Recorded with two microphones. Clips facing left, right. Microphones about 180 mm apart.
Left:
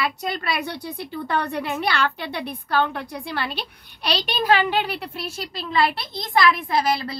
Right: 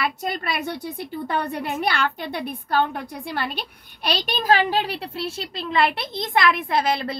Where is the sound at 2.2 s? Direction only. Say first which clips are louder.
Right 1 dB; 50° right (ahead or behind).